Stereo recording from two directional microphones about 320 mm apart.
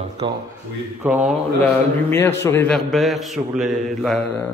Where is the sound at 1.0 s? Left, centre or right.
Centre.